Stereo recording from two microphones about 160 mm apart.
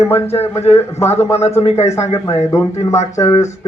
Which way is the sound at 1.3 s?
40° left (ahead or behind).